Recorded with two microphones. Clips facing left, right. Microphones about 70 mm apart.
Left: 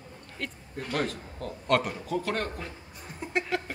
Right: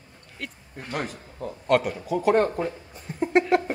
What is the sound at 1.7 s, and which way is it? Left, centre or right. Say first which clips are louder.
A man's voice: right 4 dB; centre.